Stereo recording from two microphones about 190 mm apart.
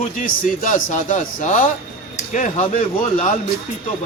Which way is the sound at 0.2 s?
40° left (ahead or behind).